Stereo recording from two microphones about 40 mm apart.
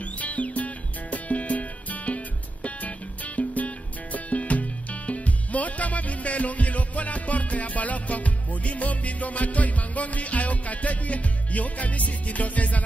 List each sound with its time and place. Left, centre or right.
0.2 s music: left